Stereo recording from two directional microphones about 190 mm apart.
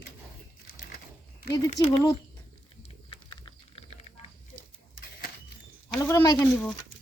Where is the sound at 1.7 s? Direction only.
30° left (ahead or behind).